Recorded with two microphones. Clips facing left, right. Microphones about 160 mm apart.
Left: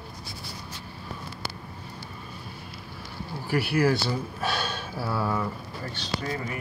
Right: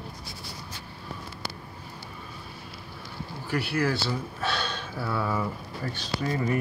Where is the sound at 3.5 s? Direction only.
10° left (ahead or behind).